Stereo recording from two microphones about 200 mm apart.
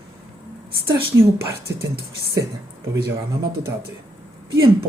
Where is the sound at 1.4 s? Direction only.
15° right (ahead or behind).